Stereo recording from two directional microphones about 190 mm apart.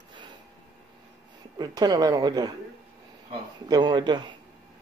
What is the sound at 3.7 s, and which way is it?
Speech, 25° right (ahead or behind).